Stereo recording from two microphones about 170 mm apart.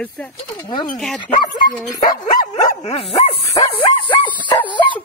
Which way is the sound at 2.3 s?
45° left (ahead or behind).